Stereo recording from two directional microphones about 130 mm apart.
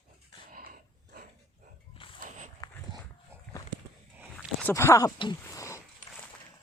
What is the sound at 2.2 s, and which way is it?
Walk, 70° right (ahead or behind).